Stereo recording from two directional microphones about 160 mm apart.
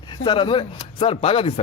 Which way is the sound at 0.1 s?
30° left (ahead or behind).